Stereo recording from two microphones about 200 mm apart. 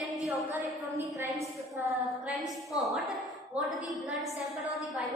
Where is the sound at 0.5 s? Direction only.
10° right (ahead or behind).